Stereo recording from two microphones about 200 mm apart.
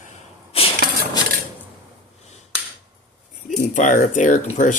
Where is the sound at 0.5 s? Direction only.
30° left (ahead or behind).